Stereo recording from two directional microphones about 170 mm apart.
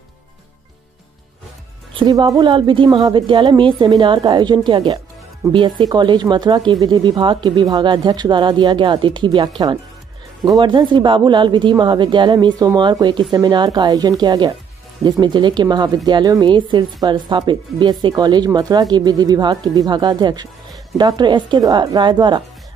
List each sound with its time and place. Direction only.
2.0 s speech: 25° right (ahead or behind)